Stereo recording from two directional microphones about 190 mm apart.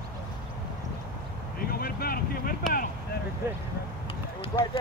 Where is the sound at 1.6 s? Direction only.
50° left (ahead or behind).